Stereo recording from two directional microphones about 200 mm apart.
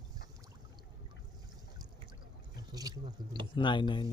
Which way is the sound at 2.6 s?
20° right (ahead or behind).